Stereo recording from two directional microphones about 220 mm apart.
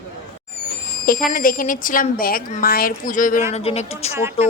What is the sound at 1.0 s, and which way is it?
Speech, 40° left (ahead or behind).